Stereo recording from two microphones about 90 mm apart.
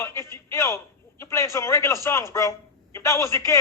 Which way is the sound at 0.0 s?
30° left (ahead or behind).